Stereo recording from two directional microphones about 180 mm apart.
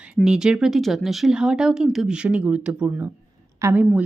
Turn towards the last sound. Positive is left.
turn(degrees=-10)  # may be behind; listen again after turning